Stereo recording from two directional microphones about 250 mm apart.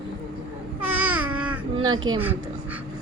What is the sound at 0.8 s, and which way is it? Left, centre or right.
Babbling, centre.